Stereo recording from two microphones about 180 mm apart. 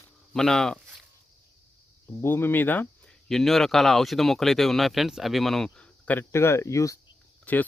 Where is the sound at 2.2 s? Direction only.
15° left (ahead or behind).